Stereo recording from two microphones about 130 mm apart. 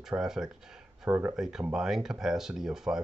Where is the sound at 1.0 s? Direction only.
15° right (ahead or behind).